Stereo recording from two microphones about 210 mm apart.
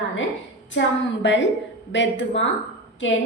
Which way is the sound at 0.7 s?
60° left (ahead or behind).